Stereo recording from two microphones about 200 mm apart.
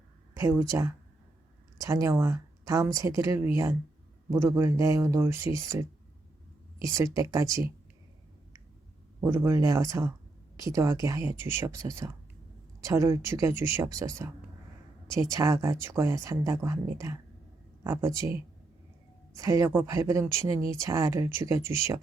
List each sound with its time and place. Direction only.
0.3 s speech: 15° right (ahead or behind)
9.2 s speech: 15° right (ahead or behind)
15.3 s speech: 15° right (ahead or behind)
19.4 s speech: 15° right (ahead or behind)